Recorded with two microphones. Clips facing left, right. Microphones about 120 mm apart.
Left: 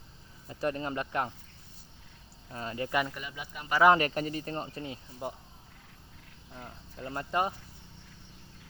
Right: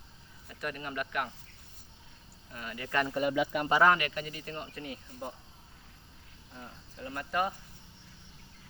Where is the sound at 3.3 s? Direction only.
85° right.